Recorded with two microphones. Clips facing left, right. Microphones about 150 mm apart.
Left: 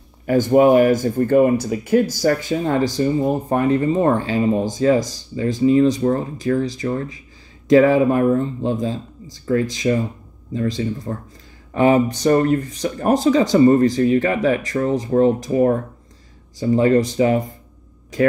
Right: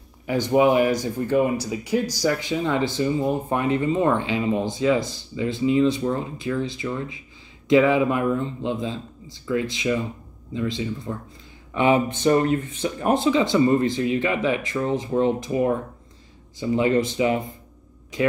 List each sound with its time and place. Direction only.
0.3 s speech: 45° left (ahead or behind)